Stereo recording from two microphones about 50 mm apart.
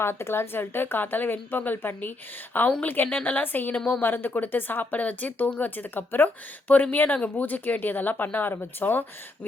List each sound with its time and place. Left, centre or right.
0.0 s a woman's voice: left